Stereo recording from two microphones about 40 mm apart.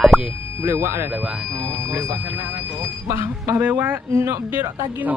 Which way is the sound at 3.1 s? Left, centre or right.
Right.